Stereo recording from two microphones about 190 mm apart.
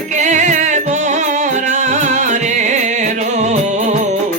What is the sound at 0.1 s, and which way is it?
Music, 40° right (ahead or behind).